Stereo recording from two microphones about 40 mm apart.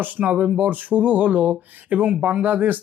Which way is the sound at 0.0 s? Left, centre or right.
Right.